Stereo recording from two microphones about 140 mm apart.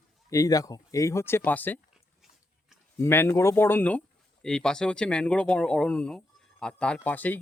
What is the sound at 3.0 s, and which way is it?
Speech, 20° left (ahead or behind).